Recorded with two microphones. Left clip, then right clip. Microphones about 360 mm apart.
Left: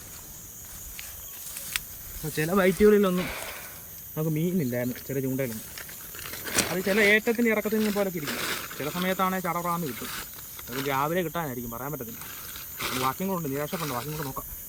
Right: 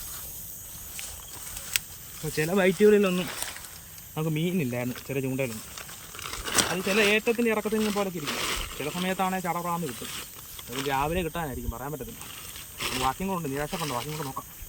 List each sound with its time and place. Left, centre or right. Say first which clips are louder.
2.2 s speech: even; centre